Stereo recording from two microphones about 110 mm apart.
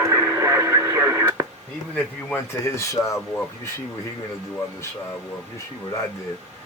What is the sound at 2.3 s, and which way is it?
Speech, 25° left (ahead or behind).